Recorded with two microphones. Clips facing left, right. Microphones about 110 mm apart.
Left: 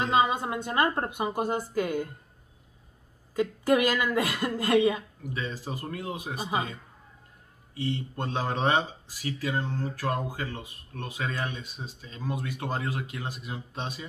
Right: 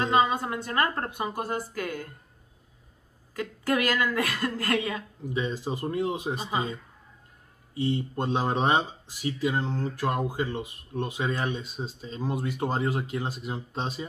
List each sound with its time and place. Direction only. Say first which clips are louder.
0.0 s a woman's voice: right 1 dB; 15° left (ahead or behind)
3.3 s a woman's voice: left 4 dB; 20° left (ahead or behind)
5.2 s speech: right 5 dB; 20° right (ahead or behind)